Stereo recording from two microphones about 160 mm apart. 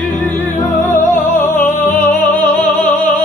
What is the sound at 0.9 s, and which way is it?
Music, 50° left (ahead or behind).